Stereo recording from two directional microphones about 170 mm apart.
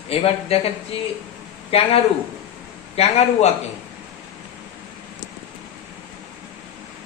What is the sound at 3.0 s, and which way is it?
Speech, 40° left (ahead or behind).